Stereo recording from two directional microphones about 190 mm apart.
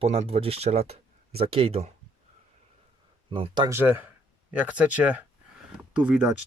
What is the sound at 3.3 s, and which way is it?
Speech, 25° right (ahead or behind).